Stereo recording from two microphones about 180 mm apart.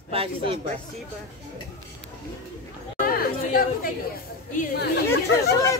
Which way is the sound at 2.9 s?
50° left (ahead or behind).